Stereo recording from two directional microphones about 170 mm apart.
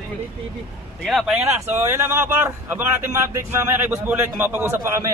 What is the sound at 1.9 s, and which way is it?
Speech, 15° right (ahead or behind).